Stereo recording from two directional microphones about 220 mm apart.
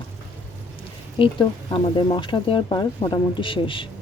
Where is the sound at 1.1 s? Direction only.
25° left (ahead or behind).